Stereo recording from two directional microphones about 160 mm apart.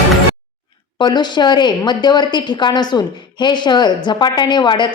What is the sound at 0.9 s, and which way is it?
A woman's voice, 25° left (ahead or behind).